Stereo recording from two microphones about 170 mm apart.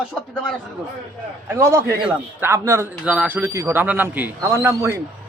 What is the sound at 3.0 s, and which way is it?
A man's voice, 5° right (ahead or behind).